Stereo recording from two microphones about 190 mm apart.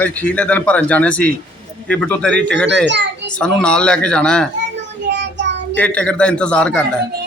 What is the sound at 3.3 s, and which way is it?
Speech, 5° left (ahead or behind).